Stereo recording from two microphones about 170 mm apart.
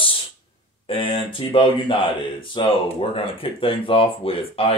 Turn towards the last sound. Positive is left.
turn(degrees=35)  # may be behind; listen again after turning